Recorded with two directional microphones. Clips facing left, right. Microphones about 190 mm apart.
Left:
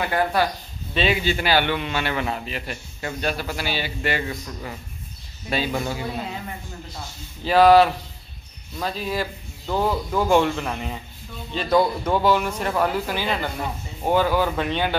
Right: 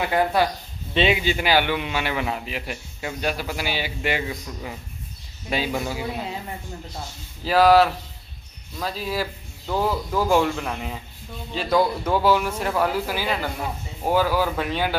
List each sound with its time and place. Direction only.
0.0 s a man's voice: 15° right (ahead or behind)
7.4 s speech: centre (ahead or behind)